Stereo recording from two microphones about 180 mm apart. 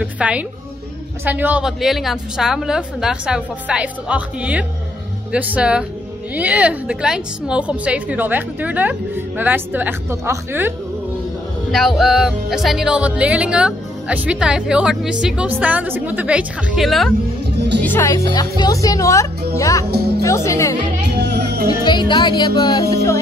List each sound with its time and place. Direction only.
0.0 s a woman's voice: 10° right (ahead or behind)
1.2 s music: 10° right (ahead or behind)
5.3 s a woman's voice: 5° right (ahead or behind)
11.7 s music: centre (ahead or behind)
15.6 s a woman's voice: 10° right (ahead or behind)
17.8 s speech: 15° left (ahead or behind)
19.9 s speech: 60° right (ahead or behind)
20.2 s speech: 15° left (ahead or behind)
21.1 s music: 70° right (ahead or behind)
21.6 s speech: 25° left (ahead or behind)